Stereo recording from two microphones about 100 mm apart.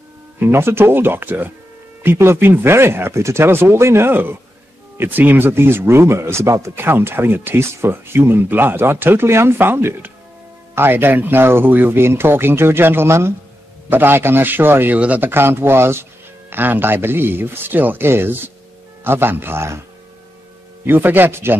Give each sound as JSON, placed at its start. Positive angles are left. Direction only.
{"t": 0.4, "sound": "speech", "side_deg": -25}
{"t": 20.8, "sound": "speech", "side_deg": -20}